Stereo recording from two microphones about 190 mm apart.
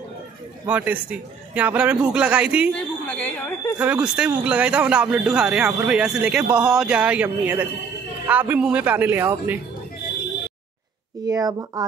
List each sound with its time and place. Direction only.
0.7 s a man's voice: 10° right (ahead or behind)
3.1 s speech: 5° left (ahead or behind)
3.7 s a man's voice: 10° right (ahead or behind)
11.2 s speech: 20° right (ahead or behind)